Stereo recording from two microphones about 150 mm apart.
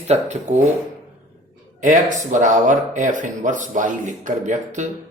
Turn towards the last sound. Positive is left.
turn(degrees=-55)  # may be behind; listen again after turning